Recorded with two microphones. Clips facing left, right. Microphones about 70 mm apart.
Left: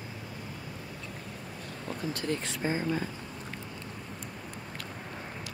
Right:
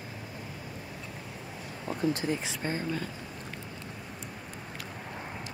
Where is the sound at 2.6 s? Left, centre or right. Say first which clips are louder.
Left 3 dB; centre.